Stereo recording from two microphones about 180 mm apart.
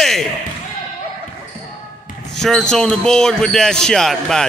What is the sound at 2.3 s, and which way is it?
Speech, centre (ahead or behind).